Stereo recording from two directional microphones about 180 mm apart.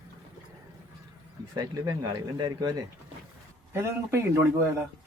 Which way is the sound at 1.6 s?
20° right (ahead or behind).